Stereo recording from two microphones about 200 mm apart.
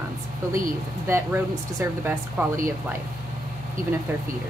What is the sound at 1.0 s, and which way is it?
Speech, 15° right (ahead or behind).